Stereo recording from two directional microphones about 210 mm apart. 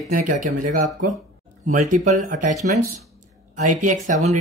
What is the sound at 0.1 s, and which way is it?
Speech, 35° right (ahead or behind).